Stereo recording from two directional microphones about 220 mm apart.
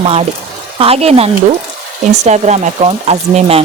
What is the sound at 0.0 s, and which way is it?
Speech, 25° right (ahead or behind).